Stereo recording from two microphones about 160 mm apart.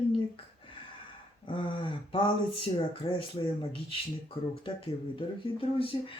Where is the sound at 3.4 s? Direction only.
35° left (ahead or behind).